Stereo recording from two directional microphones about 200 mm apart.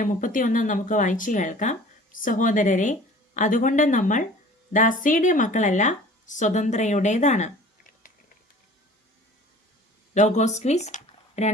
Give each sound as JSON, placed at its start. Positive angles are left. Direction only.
{"t": 0.0, "sound": "speech", "side_deg": 40}
{"t": 10.2, "sound": "speech", "side_deg": 35}